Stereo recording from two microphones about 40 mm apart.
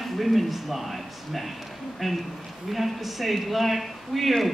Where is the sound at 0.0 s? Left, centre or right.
Centre.